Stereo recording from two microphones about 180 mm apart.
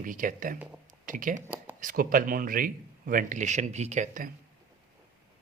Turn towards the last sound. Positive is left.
turn(degrees=-45)  # may be behind; listen again after turning